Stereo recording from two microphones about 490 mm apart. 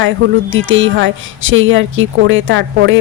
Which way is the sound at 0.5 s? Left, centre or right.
Right.